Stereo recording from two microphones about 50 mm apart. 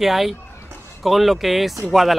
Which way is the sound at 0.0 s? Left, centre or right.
Centre.